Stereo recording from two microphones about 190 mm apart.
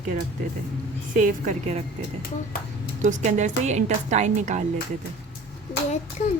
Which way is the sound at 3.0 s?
40° right (ahead or behind).